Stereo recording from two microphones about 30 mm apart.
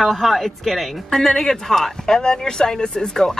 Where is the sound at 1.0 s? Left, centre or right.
Centre.